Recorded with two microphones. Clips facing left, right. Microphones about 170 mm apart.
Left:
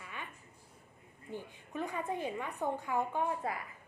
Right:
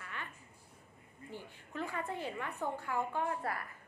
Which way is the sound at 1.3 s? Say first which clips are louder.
Left 3 dB; 15° left (ahead or behind).